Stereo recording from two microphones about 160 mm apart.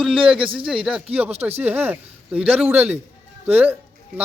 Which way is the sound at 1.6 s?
10° right (ahead or behind).